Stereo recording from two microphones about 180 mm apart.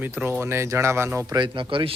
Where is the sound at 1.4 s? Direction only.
25° right (ahead or behind).